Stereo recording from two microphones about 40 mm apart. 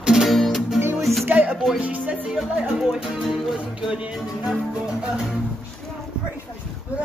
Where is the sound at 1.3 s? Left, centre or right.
Right.